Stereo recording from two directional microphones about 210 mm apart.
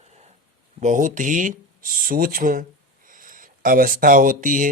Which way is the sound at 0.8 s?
35° right (ahead or behind).